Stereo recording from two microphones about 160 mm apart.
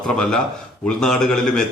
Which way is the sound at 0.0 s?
5° left (ahead or behind).